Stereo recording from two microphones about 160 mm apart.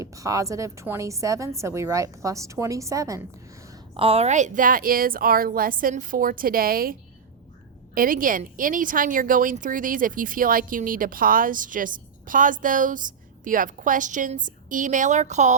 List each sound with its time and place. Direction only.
0.0 s a woman's voice: 20° right (ahead or behind)
3.9 s a woman's voice: 35° right (ahead or behind); by 6.9 s 65° right (ahead or behind)
7.9 s a woman's voice: 60° right (ahead or behind)